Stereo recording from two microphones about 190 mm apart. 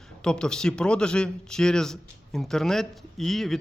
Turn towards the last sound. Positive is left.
turn(degrees=0)  # may be behind; listen again after turning